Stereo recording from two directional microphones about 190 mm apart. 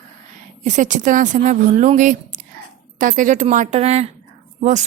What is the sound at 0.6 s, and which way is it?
Speech, 40° right (ahead or behind).